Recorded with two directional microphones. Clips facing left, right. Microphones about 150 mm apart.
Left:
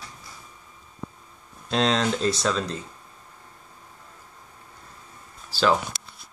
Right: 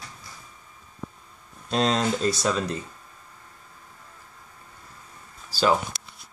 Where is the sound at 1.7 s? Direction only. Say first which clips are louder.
Even; 5° right (ahead or behind).